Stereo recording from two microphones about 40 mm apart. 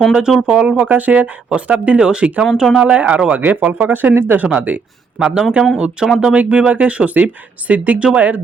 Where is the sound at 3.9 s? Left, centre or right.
Right.